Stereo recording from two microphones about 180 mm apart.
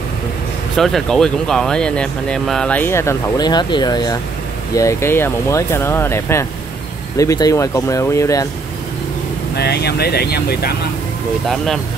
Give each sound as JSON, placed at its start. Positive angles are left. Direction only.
{"t": 0.7, "sound": "speech", "side_deg": 0}
{"t": 9.6, "sound": "speech", "side_deg": 65}
{"t": 11.4, "sound": "speech", "side_deg": 0}